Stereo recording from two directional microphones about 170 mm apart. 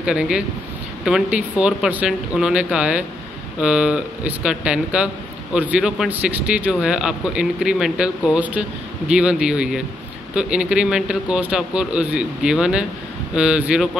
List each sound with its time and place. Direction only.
0.0 s speech: 5° right (ahead or behind)